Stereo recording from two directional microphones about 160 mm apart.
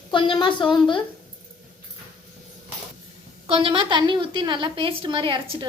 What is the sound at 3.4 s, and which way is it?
A woman's voice, 35° right (ahead or behind).